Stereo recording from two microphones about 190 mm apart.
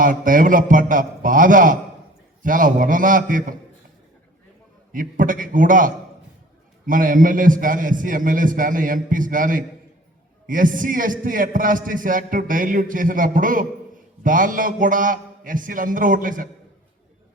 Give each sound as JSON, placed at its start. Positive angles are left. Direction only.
{"t": 0.0, "sound": "a man's voice", "side_deg": -45}
{"t": 4.9, "sound": "a man's voice", "side_deg": -45}